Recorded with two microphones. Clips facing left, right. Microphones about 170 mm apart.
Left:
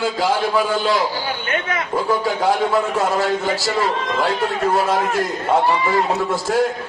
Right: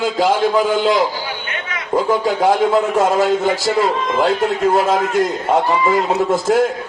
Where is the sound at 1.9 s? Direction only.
20° right (ahead or behind).